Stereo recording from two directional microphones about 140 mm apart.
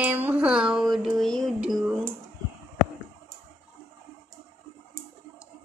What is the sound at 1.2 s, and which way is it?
Music, centre (ahead or behind).